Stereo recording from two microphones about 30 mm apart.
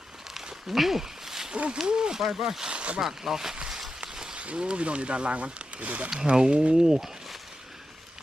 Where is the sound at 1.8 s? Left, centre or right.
Right.